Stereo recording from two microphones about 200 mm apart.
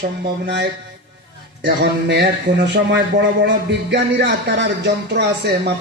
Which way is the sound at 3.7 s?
60° right (ahead or behind).